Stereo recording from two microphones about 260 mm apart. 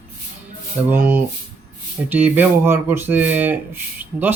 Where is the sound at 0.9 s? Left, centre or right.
Centre.